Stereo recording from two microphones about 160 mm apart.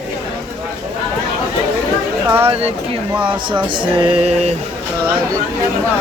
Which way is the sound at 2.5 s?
35° right (ahead or behind).